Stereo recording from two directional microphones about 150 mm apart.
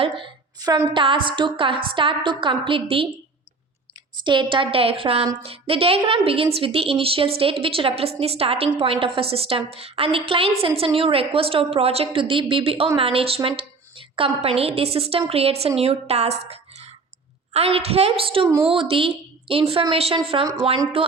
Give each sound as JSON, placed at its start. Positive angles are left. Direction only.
{"t": 0.0, "sound": "a woman's voice", "side_deg": -30}
{"t": 4.2, "sound": "a woman's voice", "side_deg": -30}
{"t": 18.4, "sound": "a woman's voice", "side_deg": -15}
{"t": 18.7, "sound": "a woman's voice", "side_deg": -35}